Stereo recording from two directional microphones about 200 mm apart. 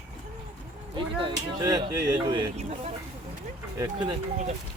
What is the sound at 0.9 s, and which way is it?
Speech, 20° right (ahead or behind).